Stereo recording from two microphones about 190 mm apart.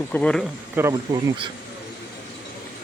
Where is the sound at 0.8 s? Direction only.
15° right (ahead or behind).